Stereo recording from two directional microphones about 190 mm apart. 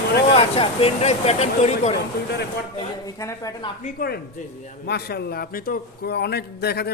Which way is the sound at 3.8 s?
45° left (ahead or behind).